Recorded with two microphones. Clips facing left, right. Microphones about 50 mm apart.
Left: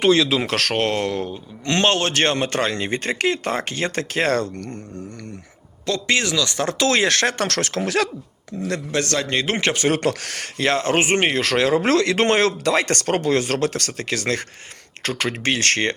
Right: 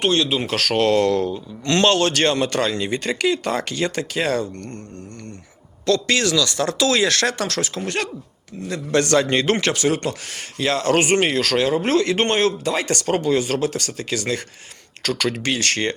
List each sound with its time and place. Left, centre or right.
0.3 s speech: left
0.8 s speech: left
5.8 s speech: left
7.4 s speech: left
8.9 s a man's voice: centre
9.6 s speech: left
10.0 s speech: left
10.7 s speech: left
11.5 s speech: left
15.0 s speech: left
15.5 s speech: left